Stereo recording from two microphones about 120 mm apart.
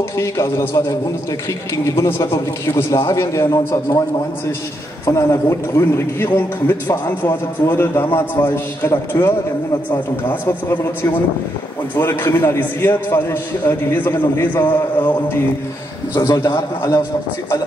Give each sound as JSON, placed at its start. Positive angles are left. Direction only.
{"t": 0.2, "sound": "a man's voice", "side_deg": 25}
{"t": 5.0, "sound": "a man's voice", "side_deg": 25}
{"t": 16.2, "sound": "a man's voice", "side_deg": 25}